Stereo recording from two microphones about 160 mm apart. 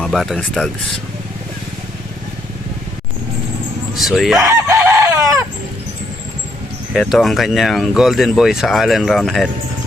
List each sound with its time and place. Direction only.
0.0 s speech: centre (ahead or behind)
3.9 s speech: centre (ahead or behind)
4.4 s chicken: 20° right (ahead or behind)
6.9 s speech: centre (ahead or behind)